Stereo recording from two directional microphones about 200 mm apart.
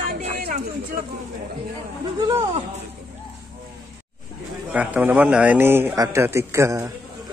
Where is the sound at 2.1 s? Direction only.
20° right (ahead or behind).